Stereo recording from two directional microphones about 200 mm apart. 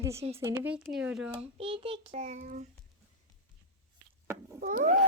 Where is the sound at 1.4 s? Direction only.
25° right (ahead or behind).